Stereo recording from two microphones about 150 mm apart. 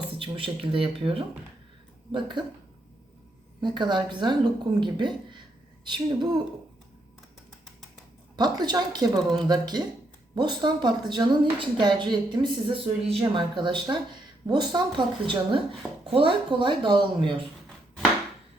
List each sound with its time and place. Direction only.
0.2 s a woman's voice: 35° right (ahead or behind)
3.6 s a woman's voice: 30° right (ahead or behind)
8.4 s a woman's voice: 25° right (ahead or behind)